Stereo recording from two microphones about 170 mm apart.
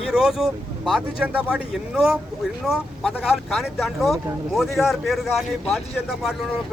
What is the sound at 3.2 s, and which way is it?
Speech, centre (ahead or behind).